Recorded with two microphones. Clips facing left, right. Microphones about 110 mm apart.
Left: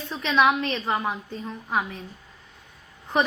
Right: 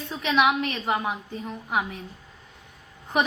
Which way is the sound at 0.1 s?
15° right (ahead or behind).